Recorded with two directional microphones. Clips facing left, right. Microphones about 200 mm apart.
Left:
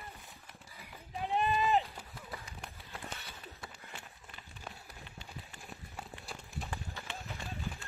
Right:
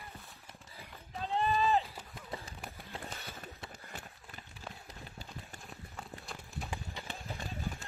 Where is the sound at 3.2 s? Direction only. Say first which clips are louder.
Right 4 dB; 50° right (ahead or behind).